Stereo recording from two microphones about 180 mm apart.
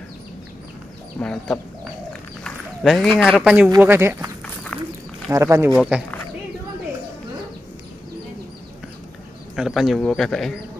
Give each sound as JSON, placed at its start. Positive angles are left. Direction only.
{"t": 1.2, "sound": "speech", "side_deg": 5}
{"t": 5.3, "sound": "speech", "side_deg": -15}
{"t": 5.8, "sound": "speech", "side_deg": -5}
{"t": 9.6, "sound": "speech", "side_deg": 0}